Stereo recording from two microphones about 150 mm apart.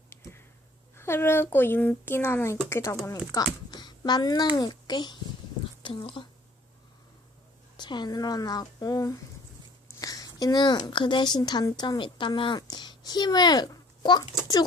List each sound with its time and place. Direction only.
0.1 s a sound: 15° left (ahead or behind)
0.9 s a child's voice: 15° left (ahead or behind); by 6.2 s 35° left (ahead or behind)
7.8 s a woman's voice: 30° left (ahead or behind)